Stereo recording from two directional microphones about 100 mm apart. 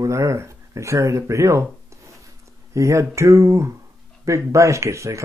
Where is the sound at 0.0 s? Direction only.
30° right (ahead or behind).